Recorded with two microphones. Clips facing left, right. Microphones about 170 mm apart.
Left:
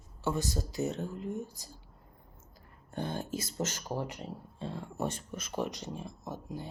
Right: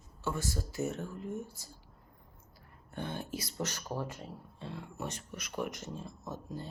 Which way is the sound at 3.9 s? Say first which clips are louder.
Left 2 dB; 20° left (ahead or behind).